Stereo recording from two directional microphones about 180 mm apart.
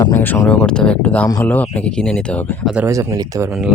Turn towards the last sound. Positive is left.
turn(degrees=-15)  # may be behind; listen again after turning